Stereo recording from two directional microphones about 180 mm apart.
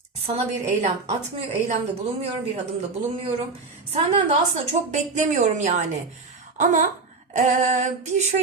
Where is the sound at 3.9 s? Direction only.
35° right (ahead or behind).